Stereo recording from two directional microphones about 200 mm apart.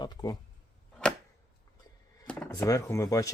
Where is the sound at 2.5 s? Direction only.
15° left (ahead or behind).